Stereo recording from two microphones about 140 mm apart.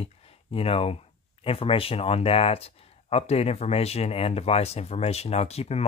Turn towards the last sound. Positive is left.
turn(degrees=50)  # may be behind; listen again after turning